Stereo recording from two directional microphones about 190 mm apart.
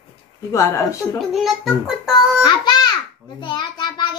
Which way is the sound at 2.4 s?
20° left (ahead or behind).